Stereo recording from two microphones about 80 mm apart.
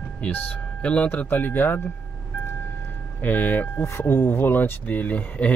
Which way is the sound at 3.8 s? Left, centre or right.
Left.